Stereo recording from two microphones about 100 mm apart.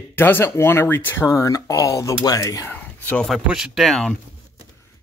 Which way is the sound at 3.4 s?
5° right (ahead or behind).